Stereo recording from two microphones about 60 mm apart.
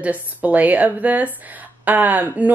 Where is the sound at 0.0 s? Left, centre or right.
Right.